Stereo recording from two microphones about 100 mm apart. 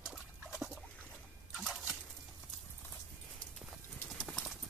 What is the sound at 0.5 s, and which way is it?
Rodents, centre (ahead or behind).